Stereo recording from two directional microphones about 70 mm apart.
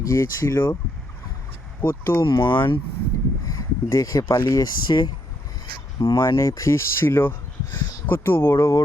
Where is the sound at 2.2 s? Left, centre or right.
Left.